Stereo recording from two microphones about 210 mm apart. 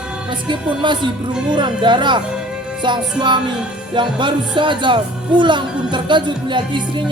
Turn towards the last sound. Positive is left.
turn(degrees=-20)  # may be behind; listen again after turning